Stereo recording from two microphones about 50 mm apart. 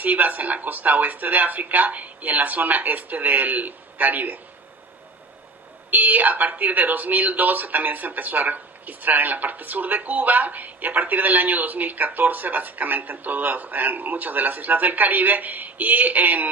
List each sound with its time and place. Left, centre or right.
0.0 s speech: right
5.9 s speech: right